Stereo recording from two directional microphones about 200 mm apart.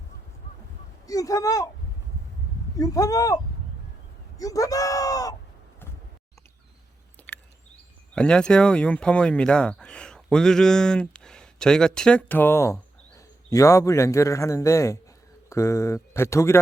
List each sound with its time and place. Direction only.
1.0 s speech: 15° left (ahead or behind)
2.7 s speech: 15° left (ahead or behind)
7.2 s a sound: 10° left (ahead or behind)
8.1 s speech: 5° left (ahead or behind)